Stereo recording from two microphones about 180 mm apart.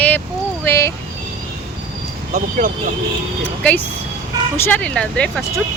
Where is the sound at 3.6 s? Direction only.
10° left (ahead or behind).